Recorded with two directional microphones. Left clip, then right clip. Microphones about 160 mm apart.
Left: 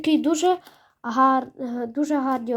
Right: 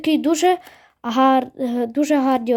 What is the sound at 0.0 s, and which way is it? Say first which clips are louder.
A woman's voice: right 3 dB; 20° right (ahead or behind).